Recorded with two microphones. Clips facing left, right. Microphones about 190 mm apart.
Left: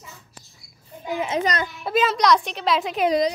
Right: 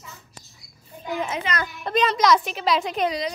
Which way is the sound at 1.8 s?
5° left (ahead or behind).